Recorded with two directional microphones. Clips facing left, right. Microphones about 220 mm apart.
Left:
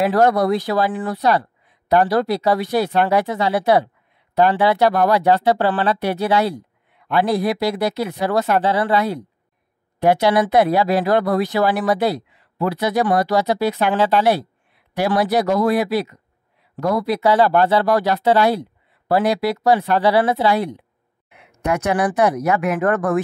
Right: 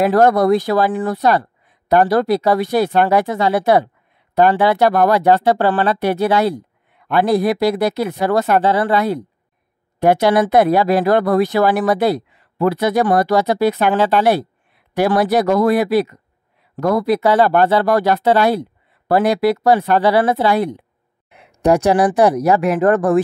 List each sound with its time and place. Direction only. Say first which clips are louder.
0.0 s speech: right 3 dB; 50° right (ahead or behind)
21.3 s speech: right 7 dB; 35° right (ahead or behind)